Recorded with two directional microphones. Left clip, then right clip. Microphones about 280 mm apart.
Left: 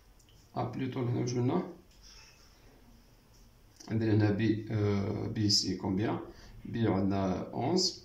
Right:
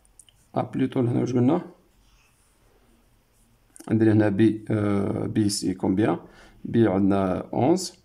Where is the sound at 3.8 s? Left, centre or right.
Right.